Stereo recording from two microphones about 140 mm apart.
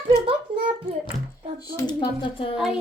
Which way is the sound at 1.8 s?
30° left (ahead or behind).